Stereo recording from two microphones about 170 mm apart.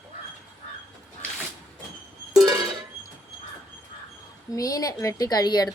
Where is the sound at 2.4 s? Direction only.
25° right (ahead or behind).